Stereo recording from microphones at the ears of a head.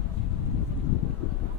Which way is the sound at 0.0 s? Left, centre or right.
Left.